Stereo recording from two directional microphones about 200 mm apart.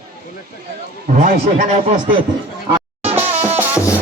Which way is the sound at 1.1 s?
35° right (ahead or behind).